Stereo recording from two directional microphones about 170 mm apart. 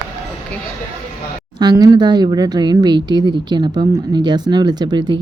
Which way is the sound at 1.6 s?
25° right (ahead or behind).